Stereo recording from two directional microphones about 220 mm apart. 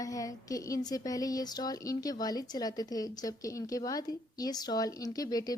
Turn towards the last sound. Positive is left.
turn(degrees=15)  # may be behind; listen again after turning